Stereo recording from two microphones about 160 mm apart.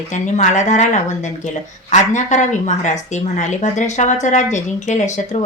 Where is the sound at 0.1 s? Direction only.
50° left (ahead or behind).